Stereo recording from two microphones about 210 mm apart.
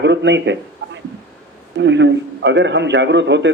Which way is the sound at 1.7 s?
55° right (ahead or behind).